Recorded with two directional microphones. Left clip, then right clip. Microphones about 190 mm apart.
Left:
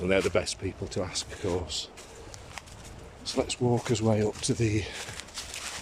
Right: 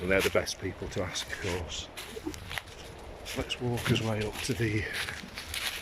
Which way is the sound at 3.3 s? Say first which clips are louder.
Left 6 dB; 20° left (ahead or behind).